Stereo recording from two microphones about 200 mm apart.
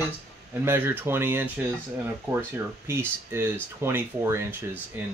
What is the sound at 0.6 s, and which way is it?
Speech, 10° right (ahead or behind).